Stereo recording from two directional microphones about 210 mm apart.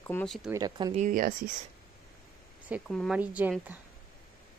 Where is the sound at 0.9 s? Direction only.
40° right (ahead or behind).